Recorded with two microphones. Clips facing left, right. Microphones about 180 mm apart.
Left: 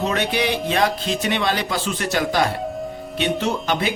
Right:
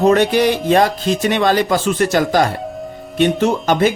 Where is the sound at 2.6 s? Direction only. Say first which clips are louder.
Even; centre (ahead or behind).